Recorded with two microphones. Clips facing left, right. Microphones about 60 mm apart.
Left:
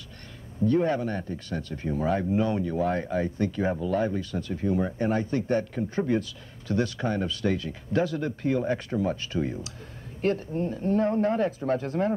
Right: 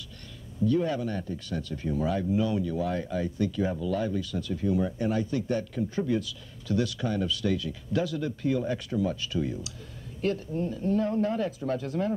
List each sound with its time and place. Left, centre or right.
0.6 s speech: left